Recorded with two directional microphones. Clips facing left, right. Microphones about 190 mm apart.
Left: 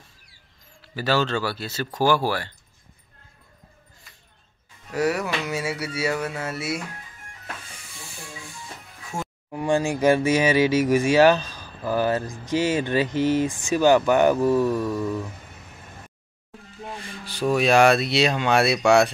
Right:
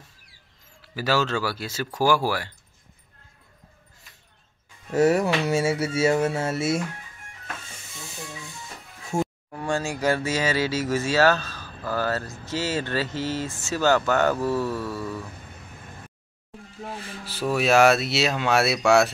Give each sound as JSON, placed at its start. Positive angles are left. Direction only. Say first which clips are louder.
{"t": 0.9, "sound": "speech", "louder": "left 1 dB", "side_deg": -5}
{"t": 4.9, "sound": "a sound", "louder": "right 4 dB", "side_deg": -25}
{"t": 9.1, "sound": "speech", "louder": "right 6 dB", "side_deg": -10}
{"t": 9.5, "sound": "speech", "louder": "left 5 dB", "side_deg": 15}
{"t": 16.8, "sound": "speech", "louder": "even", "side_deg": -5}